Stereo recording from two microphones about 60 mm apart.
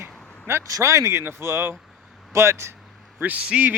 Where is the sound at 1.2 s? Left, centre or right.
Right.